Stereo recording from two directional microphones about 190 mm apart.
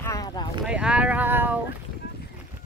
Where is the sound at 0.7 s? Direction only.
5° right (ahead or behind).